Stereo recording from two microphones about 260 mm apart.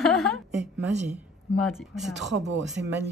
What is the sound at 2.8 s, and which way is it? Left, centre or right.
Speech, right.